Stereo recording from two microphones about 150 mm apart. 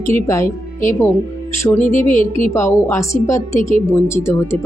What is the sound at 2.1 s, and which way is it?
Speech, 60° left (ahead or behind).